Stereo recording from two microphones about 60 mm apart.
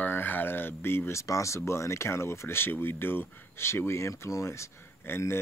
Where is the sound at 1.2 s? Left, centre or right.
Left.